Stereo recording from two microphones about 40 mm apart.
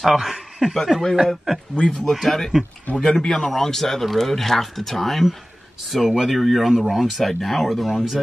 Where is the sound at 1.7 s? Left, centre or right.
Centre.